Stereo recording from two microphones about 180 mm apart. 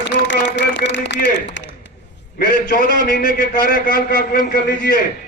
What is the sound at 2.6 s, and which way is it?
A man's voice, 55° left (ahead or behind).